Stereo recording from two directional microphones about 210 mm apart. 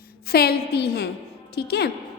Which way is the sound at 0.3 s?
50° left (ahead or behind).